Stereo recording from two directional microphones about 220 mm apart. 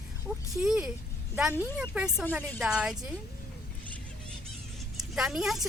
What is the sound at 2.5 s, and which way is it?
Speech, centre (ahead or behind).